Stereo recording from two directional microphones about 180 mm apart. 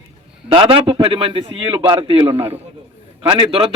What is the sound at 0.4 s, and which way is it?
A man's voice, 30° right (ahead or behind).